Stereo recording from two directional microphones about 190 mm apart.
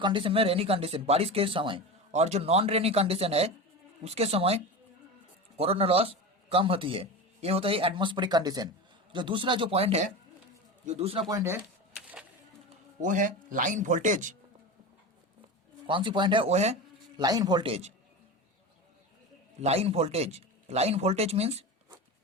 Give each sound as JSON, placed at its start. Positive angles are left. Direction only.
{"t": 0.0, "sound": "a man's voice", "side_deg": -25}
{"t": 11.3, "sound": "speech", "side_deg": -15}
{"t": 13.0, "sound": "speech", "side_deg": -45}
{"t": 15.9, "sound": "speech", "side_deg": -25}
{"t": 17.2, "sound": "speech", "side_deg": -20}
{"t": 19.6, "sound": "speech", "side_deg": -35}